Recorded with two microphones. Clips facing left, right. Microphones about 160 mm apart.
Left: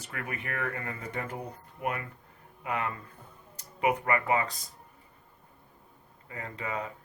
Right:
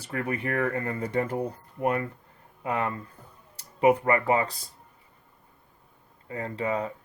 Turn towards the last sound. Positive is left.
turn(degrees=-30)  # may be behind; listen again after turning